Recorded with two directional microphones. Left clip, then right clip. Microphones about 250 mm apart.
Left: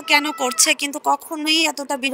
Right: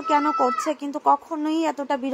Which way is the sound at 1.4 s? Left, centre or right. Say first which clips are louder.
Left 6 dB; left.